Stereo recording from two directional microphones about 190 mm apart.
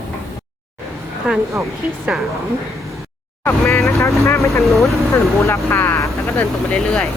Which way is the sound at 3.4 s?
15° left (ahead or behind).